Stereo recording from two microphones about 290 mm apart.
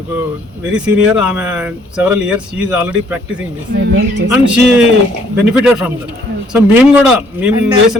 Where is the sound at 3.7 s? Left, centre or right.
Right.